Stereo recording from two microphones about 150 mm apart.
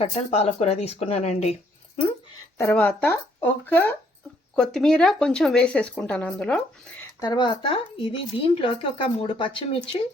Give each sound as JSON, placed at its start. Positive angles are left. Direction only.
{"t": 0.0, "sound": "speech", "side_deg": 45}
{"t": 2.6, "sound": "speech", "side_deg": 15}
{"t": 7.2, "sound": "speech", "side_deg": 30}